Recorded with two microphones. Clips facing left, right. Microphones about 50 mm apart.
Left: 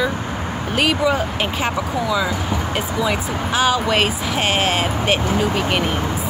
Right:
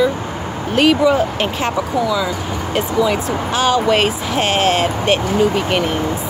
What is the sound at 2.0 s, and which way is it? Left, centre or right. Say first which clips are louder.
Speech: right 2 dB; centre.